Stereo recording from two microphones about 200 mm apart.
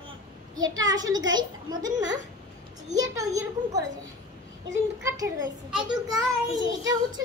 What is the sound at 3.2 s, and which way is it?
Speech, 15° right (ahead or behind).